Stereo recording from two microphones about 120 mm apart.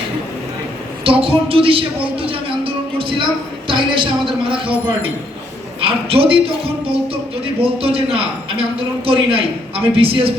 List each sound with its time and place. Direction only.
1.0 s a sound: 50° right (ahead or behind)
3.7 s a man's voice: 45° right (ahead or behind)
5.8 s a man's voice: 50° right (ahead or behind)
7.6 s a man's voice: 50° right (ahead or behind)